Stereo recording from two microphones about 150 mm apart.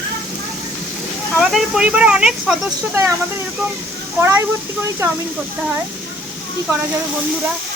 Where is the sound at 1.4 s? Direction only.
Centre (ahead or behind).